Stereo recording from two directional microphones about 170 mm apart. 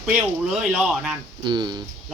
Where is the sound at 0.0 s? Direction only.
5° right (ahead or behind).